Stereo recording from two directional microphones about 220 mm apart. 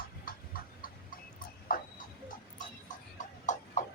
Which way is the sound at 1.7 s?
40° left (ahead or behind).